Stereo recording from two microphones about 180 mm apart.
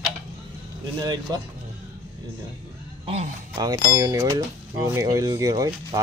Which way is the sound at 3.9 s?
20° right (ahead or behind).